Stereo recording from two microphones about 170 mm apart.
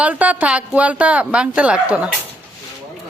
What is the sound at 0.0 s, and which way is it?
A woman's voice, 10° right (ahead or behind).